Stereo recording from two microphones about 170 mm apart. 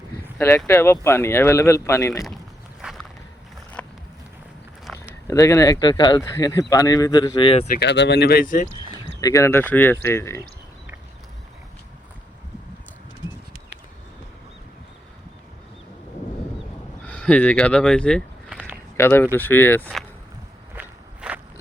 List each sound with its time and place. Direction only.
0.3 s speech: 15° left (ahead or behind)
2.8 s vehicle: centre (ahead or behind)
3.8 s a sound: 10° left (ahead or behind)
5.3 s speech: 20° left (ahead or behind)
7.7 s speech: 85° left; by 8.6 s 55° left (ahead or behind)
9.2 s speech: 15° left (ahead or behind)
17.1 s speech: 10° left (ahead or behind)
20.7 s walk: 10° right (ahead or behind)